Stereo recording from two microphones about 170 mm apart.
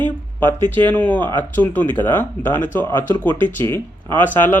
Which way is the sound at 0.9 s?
10° left (ahead or behind).